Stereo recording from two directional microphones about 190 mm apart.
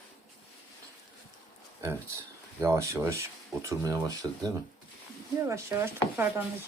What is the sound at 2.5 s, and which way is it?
Speech, 15° right (ahead or behind).